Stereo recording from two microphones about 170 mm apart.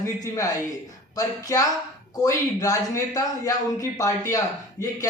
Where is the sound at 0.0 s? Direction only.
20° left (ahead or behind).